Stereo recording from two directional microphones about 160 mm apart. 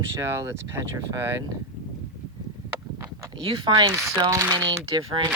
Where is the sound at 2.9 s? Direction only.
20° right (ahead or behind).